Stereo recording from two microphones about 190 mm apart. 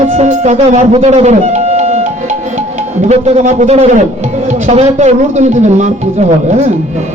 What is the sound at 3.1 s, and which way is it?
Music, 40° right (ahead or behind).